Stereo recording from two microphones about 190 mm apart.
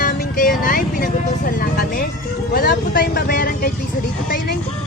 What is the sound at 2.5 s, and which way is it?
Vehicle, 50° left (ahead or behind).